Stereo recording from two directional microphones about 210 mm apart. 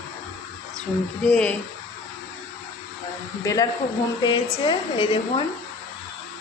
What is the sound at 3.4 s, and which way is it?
A woman's voice, 15° left (ahead or behind).